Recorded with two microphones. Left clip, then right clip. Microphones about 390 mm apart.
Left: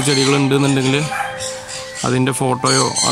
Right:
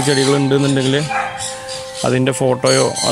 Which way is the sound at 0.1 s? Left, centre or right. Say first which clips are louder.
Even; centre.